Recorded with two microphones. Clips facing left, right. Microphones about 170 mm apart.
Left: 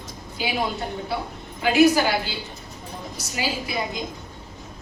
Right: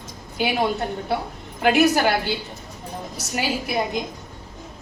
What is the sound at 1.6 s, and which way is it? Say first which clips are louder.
Speech: even; 60° right (ahead or behind).